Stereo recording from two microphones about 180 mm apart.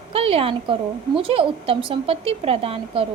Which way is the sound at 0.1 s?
30° right (ahead or behind).